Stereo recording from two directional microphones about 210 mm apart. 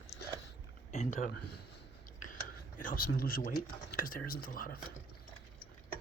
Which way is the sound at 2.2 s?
40° left (ahead or behind).